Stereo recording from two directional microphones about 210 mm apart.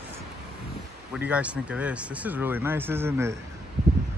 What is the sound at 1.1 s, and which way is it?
Speech, 5° right (ahead or behind).